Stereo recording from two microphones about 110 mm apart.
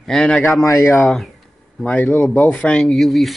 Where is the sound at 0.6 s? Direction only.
30° left (ahead or behind).